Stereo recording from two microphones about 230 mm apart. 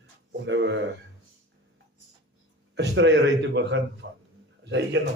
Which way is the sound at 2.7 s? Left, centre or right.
Right.